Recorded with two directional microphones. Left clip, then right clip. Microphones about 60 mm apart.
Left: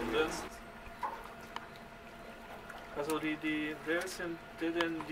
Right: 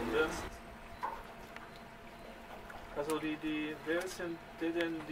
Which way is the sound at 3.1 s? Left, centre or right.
Left.